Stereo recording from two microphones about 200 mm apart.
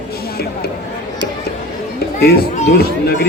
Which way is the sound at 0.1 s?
50° left (ahead or behind).